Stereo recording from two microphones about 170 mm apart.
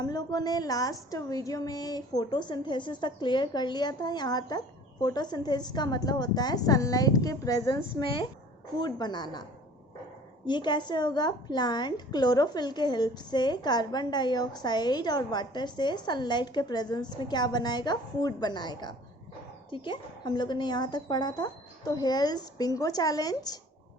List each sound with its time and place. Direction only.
0.0 s a woman's voice: 25° left (ahead or behind)
10.4 s a woman's voice: 25° left (ahead or behind)